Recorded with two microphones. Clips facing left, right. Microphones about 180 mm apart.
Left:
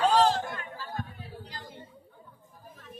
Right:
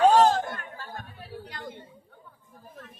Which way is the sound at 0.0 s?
50° right (ahead or behind).